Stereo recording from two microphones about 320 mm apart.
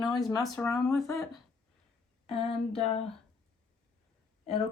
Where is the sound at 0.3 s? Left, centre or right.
Centre.